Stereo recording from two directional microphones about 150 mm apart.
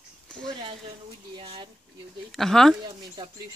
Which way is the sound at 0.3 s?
5° left (ahead or behind).